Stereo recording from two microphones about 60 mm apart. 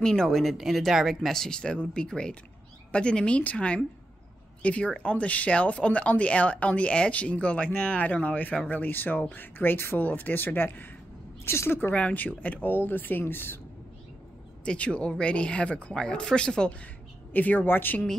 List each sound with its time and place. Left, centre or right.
0.0 s speech: centre
0.4 s speech: centre; by 10.9 s left
11.4 s a woman's voice: left
11.9 s speech: left
14.6 s speech: centre
17.3 s speech: left